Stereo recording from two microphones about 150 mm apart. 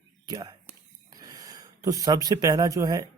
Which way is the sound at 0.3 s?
25° right (ahead or behind).